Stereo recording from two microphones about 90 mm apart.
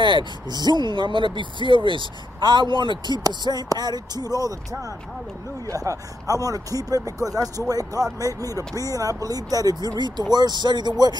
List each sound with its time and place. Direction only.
0.0 s speech: 65° right (ahead or behind)
3.3 s speech: 45° right (ahead or behind)